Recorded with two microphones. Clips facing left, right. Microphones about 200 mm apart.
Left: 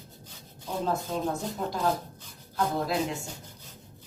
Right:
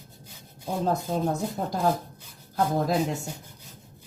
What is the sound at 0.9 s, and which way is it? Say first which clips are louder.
Speech: right 3 dB; 40° right (ahead or behind).